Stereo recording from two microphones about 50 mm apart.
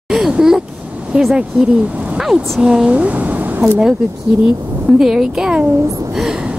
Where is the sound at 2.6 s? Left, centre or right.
Centre.